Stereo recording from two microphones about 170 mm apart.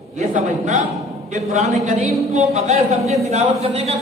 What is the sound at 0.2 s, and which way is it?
A man's voice, 45° right (ahead or behind).